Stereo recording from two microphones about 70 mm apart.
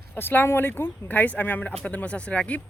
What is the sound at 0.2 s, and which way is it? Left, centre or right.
Speech, left.